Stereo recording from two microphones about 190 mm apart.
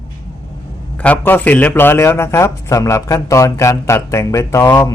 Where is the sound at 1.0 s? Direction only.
10° left (ahead or behind).